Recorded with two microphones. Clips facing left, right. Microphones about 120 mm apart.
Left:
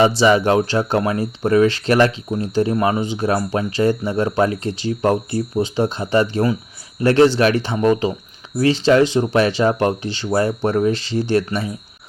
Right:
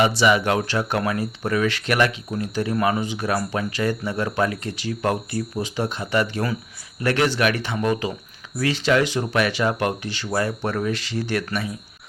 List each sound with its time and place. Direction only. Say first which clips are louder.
0.2 s speech: left 5 dB; 30° left (ahead or behind)